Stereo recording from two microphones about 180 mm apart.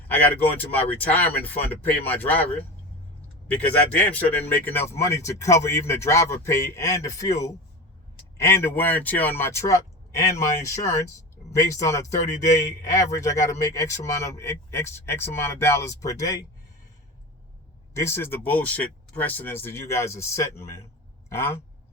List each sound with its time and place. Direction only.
0.1 s speech: 10° left (ahead or behind)
4.0 s speech: 10° left (ahead or behind)
8.4 s speech: 15° left (ahead or behind)
17.9 s speech: 15° left (ahead or behind)